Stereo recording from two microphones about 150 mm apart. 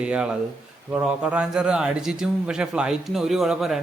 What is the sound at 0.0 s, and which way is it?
A man's voice, 5° right (ahead or behind).